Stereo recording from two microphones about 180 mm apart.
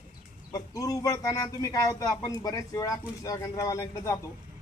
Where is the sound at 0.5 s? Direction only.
20° left (ahead or behind).